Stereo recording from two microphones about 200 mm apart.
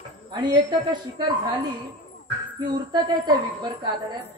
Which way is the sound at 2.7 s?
20° right (ahead or behind).